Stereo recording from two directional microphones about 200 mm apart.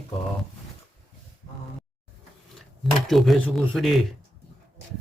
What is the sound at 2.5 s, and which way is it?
Speech, centre (ahead or behind).